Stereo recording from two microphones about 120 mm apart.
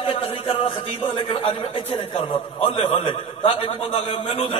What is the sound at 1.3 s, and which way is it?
Speech, 50° left (ahead or behind).